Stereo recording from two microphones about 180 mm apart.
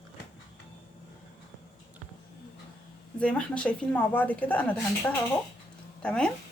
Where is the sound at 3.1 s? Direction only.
5° left (ahead or behind).